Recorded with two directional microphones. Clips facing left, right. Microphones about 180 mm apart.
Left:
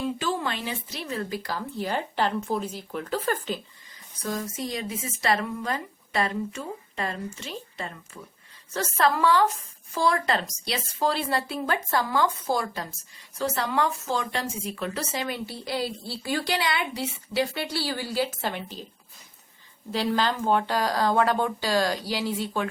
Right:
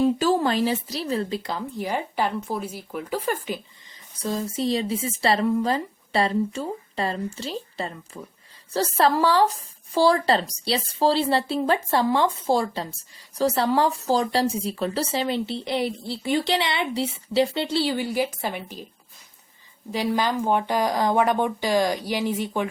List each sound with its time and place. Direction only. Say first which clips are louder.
0.0 s speech: right 8 dB; 40° right (ahead or behind); by 3.6 s 15° right (ahead or behind)
4.2 s a woman's voice: right 5 dB; 30° right (ahead or behind); by 18.9 s 10° right (ahead or behind)
19.9 s speech: right 2 dB; 15° right (ahead or behind)